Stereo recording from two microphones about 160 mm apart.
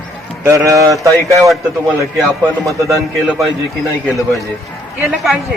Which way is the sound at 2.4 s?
15° right (ahead or behind).